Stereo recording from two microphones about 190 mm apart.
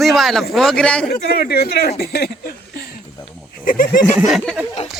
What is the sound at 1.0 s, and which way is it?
Speech, 55° left (ahead or behind).